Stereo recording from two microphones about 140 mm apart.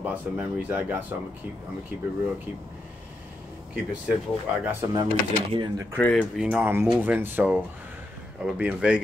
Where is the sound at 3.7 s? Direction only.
5° right (ahead or behind).